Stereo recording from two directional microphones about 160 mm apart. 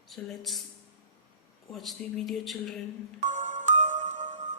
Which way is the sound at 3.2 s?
50° right (ahead or behind).